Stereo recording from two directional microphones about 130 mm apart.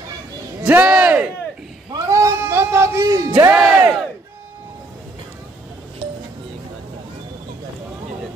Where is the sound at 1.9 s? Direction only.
25° right (ahead or behind).